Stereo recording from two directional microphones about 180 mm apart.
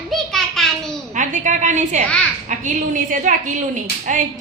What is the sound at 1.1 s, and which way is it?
A woman's voice, 45° right (ahead or behind).